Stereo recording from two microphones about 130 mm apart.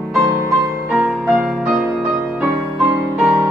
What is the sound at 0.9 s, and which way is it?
Music, 5° right (ahead or behind).